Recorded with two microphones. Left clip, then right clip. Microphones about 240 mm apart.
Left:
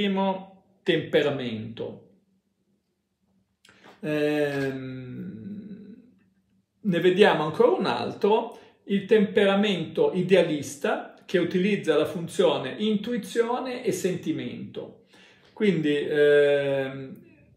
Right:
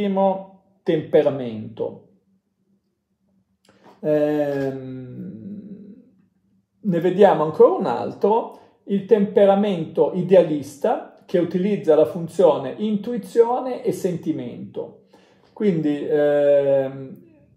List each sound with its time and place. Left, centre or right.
0.8 s speech: centre
3.6 s a sound: centre
4.6 s speech: centre
6.9 s speech: centre